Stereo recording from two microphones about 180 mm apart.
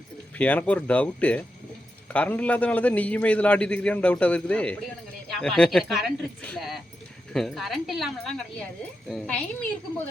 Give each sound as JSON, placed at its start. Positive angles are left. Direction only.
{"t": 0.3, "sound": "a man's voice", "side_deg": 10}